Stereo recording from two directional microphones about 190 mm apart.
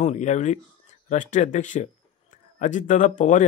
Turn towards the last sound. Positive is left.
turn(degrees=40)  # may be behind; listen again after turning